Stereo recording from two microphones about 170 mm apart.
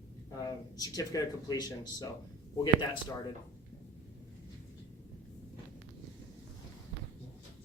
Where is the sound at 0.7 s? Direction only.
20° left (ahead or behind).